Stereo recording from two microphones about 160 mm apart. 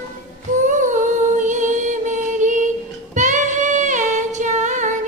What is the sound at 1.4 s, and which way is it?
Music, 50° right (ahead or behind).